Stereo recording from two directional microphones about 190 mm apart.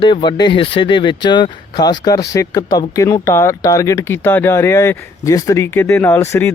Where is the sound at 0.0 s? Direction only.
25° left (ahead or behind).